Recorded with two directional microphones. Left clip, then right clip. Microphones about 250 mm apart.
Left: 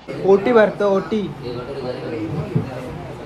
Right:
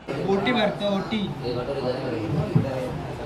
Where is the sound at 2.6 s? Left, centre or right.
Centre.